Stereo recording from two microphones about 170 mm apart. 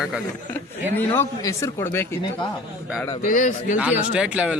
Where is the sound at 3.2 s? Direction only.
50° left (ahead or behind).